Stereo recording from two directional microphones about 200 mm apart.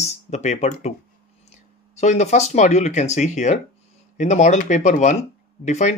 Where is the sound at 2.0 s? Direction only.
35° left (ahead or behind).